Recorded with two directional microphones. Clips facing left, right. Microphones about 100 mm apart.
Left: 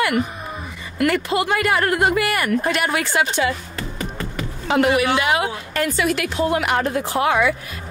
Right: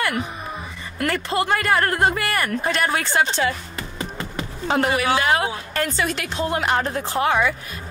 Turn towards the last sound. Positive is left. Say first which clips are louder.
# left 1 dB
turn(degrees=20)  # may be behind; listen again after turning